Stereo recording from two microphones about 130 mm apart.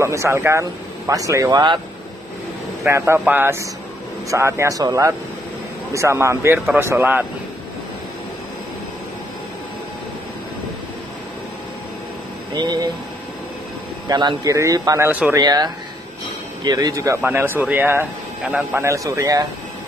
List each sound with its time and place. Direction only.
0.0 s speech: 20° right (ahead or behind)
2.8 s speech: 20° right (ahead or behind)
12.5 s speech: 30° right (ahead or behind)
14.0 s speech: 30° right (ahead or behind)
15.0 s speech: 10° right (ahead or behind)
15.3 s speech: 30° right (ahead or behind)